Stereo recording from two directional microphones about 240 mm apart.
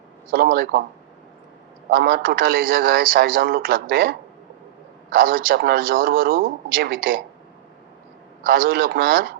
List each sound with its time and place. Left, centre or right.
0.3 s a man's voice: right
1.9 s a man's voice: right
5.1 s a man's voice: right
8.4 s a man's voice: right